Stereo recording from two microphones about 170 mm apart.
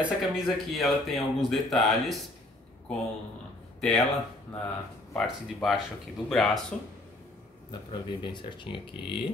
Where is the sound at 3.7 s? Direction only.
Centre (ahead or behind).